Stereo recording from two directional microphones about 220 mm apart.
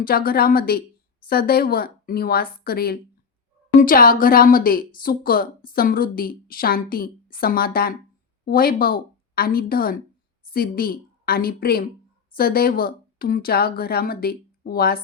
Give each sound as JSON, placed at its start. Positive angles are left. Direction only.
{"t": 0.0, "sound": "a woman's voice", "side_deg": 40}